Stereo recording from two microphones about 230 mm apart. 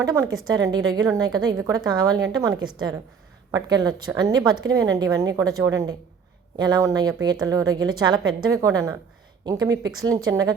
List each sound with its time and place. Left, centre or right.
0.0 s a woman's voice: centre